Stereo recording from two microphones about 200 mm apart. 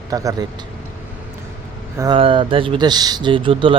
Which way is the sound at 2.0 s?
25° right (ahead or behind).